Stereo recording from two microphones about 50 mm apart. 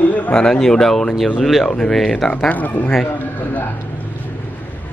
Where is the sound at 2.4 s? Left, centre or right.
Left.